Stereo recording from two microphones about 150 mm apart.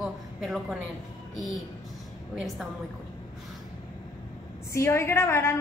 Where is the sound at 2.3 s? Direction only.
Centre (ahead or behind).